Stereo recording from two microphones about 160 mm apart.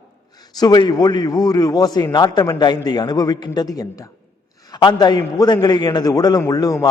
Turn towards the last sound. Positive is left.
turn(degrees=20)  # may be behind; listen again after turning